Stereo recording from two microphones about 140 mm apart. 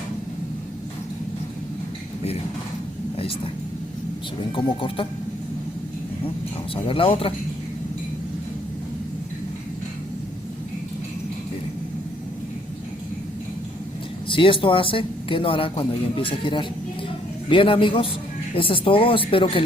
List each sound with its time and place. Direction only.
4.5 s speech: 40° left (ahead or behind)
6.8 s speech: 40° left (ahead or behind)
14.3 s speech: 40° left (ahead or behind)